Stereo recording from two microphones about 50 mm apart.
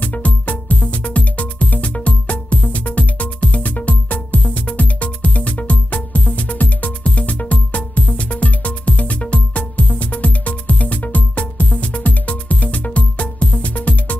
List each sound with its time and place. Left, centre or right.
0.0 s music: left